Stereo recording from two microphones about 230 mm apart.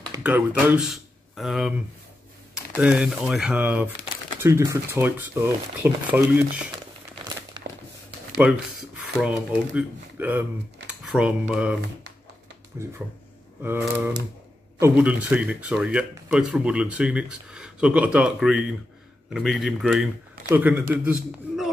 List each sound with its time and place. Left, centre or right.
0.1 s speech: centre
7.6 s a sound: centre
8.4 s speech: centre